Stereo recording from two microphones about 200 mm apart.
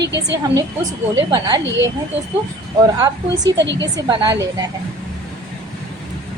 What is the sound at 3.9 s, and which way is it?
Speech, 20° right (ahead or behind).